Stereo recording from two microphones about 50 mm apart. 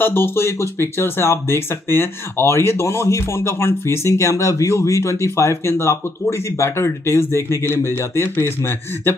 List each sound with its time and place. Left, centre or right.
0.0 s speech: left